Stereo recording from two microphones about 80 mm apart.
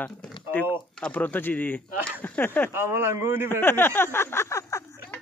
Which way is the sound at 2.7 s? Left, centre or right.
Right.